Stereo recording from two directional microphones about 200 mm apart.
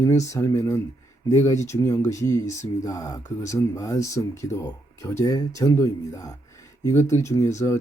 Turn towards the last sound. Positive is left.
turn(degrees=15)  # may be behind; listen again after turning